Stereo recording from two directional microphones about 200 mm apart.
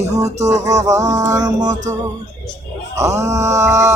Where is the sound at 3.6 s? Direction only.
35° right (ahead or behind).